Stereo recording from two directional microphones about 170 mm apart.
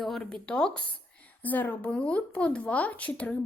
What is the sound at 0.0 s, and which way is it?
A woman's voice, 5° left (ahead or behind).